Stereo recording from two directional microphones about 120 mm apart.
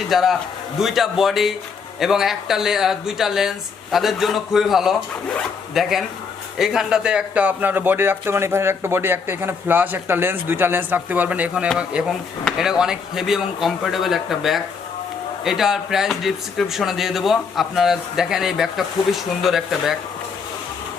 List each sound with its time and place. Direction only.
0.1 s speech: centre (ahead or behind)